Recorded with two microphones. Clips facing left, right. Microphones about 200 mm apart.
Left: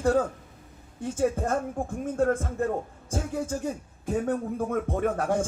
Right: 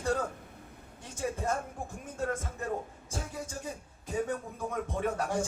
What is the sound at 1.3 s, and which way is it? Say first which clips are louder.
A man's voice: left 6 dB; 50° left (ahead or behind).